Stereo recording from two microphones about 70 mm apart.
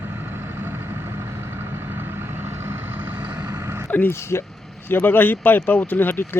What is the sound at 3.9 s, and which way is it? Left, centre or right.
Speech, left.